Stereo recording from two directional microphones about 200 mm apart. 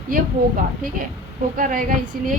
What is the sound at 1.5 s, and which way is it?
Speech, 45° right (ahead or behind).